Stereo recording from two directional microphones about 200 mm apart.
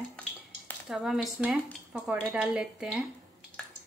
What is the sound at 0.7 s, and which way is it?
Speech, centre (ahead or behind).